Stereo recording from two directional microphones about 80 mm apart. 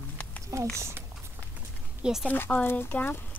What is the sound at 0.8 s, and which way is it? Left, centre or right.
Speech, right.